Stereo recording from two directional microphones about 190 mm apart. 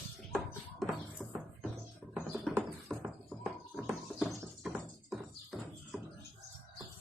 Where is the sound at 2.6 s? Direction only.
5° right (ahead or behind).